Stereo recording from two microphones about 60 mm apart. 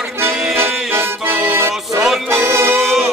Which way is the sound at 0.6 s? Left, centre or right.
Right.